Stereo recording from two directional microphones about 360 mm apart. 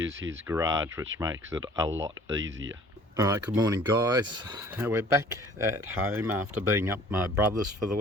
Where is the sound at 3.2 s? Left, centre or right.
Centre.